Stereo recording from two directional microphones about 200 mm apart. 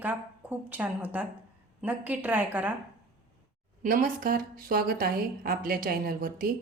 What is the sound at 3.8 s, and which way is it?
A woman's voice, 45° right (ahead or behind).